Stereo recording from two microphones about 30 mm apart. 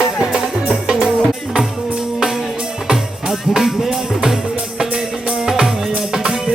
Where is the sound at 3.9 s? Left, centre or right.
Right.